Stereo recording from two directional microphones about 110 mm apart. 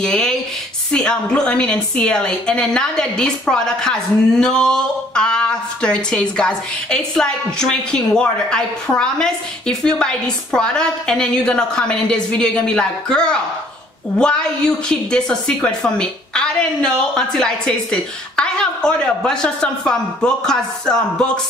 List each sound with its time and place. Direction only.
0.0 s a woman's voice: 5° left (ahead or behind)